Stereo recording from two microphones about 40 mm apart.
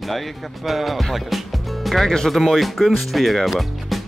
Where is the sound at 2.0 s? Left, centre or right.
Centre.